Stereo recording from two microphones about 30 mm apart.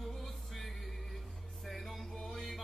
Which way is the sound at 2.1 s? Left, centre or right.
Centre.